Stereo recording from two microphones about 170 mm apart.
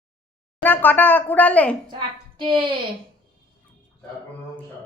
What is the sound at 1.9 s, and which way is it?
Speech, 30° right (ahead or behind).